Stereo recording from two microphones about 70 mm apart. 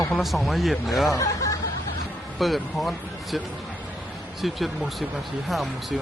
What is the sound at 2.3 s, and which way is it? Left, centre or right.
Speech, centre.